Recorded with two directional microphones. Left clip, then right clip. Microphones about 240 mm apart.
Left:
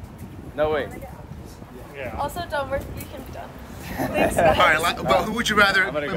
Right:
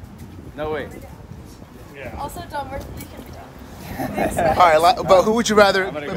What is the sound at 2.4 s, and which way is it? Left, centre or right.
Speech, centre.